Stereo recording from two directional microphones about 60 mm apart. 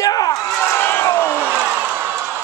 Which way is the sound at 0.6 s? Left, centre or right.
Left.